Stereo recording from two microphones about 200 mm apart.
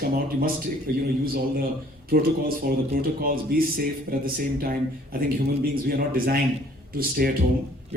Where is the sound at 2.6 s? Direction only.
50° right (ahead or behind).